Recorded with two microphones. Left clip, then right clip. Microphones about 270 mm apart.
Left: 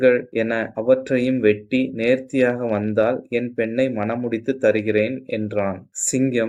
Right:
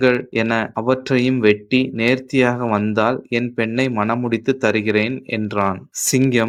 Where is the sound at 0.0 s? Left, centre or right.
Right.